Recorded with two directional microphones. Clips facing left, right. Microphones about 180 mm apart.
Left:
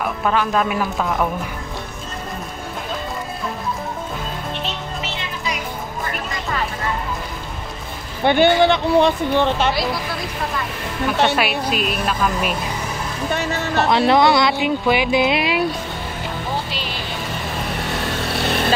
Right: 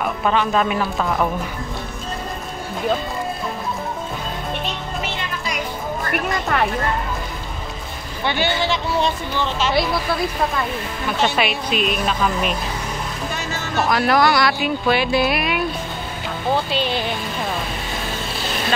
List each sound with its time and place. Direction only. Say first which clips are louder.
0.0 s speech: even; centre (ahead or behind)
6.0 s music: right 6 dB; 65° right (ahead or behind)
8.2 s speech: left 8 dB; 55° left (ahead or behind)
11.3 s speech: left 1 dB; 5° left (ahead or behind)
13.3 s music: left 5 dB; 60° left (ahead or behind)
13.8 s speech: left 2 dB; 25° left (ahead or behind)
17.8 s vehicle: left 3 dB; 70° left (ahead or behind)